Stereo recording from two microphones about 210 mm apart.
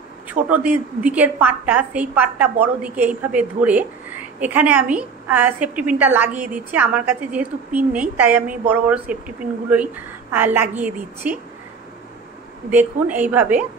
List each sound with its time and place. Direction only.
0.3 s a woman's voice: 5° right (ahead or behind)
12.7 s a woman's voice: 10° right (ahead or behind)